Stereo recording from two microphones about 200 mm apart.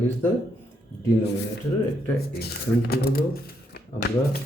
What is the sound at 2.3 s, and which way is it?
Speech, 50° left (ahead or behind).